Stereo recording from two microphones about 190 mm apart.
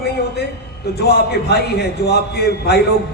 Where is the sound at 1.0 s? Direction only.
60° left (ahead or behind).